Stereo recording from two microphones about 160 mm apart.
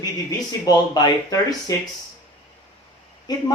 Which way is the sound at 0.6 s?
25° left (ahead or behind).